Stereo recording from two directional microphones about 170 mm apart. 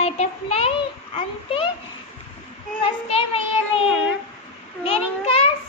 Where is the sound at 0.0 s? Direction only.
35° left (ahead or behind).